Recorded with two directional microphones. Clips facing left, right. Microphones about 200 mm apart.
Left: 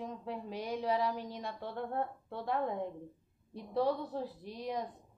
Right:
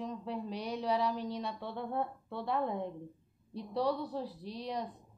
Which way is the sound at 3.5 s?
50° left (ahead or behind).